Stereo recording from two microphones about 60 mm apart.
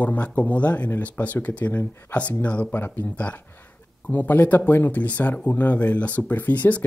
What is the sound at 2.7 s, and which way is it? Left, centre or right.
Speech, left.